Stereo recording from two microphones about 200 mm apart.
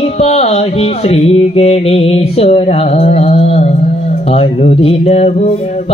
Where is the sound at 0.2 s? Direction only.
30° left (ahead or behind).